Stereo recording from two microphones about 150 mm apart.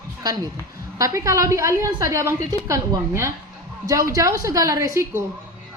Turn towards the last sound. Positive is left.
turn(degrees=-20)  # may be behind; listen again after turning